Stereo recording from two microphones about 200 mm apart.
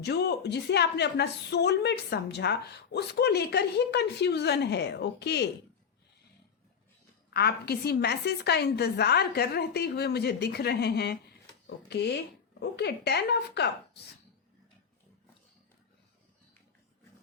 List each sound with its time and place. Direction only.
0.0 s a woman's voice: 55° left (ahead or behind)
7.3 s a woman's voice: 55° left (ahead or behind)